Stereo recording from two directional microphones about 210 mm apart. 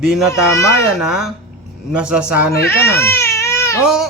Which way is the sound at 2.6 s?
10° left (ahead or behind).